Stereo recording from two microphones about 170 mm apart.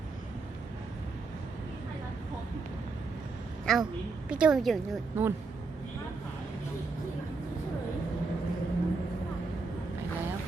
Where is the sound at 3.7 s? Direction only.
Centre (ahead or behind).